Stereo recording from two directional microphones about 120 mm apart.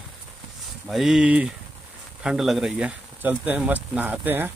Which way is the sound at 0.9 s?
5° right (ahead or behind).